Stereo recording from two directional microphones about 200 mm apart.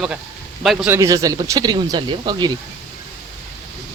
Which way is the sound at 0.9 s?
15° right (ahead or behind).